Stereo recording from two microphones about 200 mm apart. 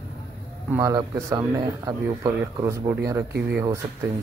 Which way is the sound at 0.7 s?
15° right (ahead or behind).